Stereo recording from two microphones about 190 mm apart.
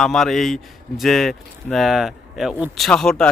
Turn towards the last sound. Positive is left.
turn(degrees=5)  # may be behind; listen again after turning